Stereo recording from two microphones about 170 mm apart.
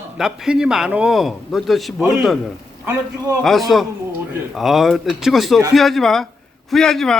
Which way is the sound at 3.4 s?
Centre (ahead or behind).